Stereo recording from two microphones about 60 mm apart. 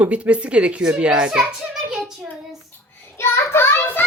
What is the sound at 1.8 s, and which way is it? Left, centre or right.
Child singing, centre.